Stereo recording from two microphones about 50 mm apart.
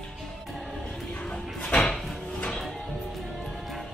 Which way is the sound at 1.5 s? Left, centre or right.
Centre.